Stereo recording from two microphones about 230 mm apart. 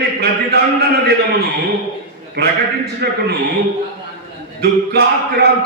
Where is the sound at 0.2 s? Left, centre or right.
Right.